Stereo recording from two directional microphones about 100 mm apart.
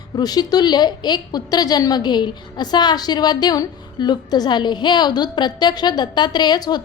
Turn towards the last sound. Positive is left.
turn(degrees=45)  # may be behind; listen again after turning